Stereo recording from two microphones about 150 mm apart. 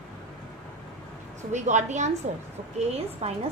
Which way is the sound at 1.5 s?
50° right (ahead or behind).